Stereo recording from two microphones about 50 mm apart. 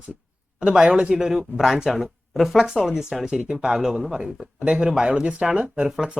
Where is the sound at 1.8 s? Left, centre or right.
Centre.